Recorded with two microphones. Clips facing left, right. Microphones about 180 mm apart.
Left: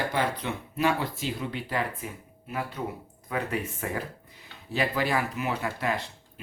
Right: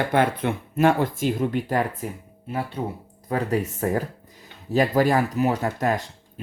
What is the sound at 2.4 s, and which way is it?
Speech, 30° right (ahead or behind).